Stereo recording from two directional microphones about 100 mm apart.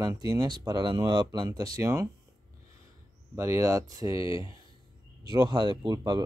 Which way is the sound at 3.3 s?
25° right (ahead or behind).